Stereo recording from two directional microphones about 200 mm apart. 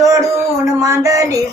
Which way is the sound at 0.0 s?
15° right (ahead or behind).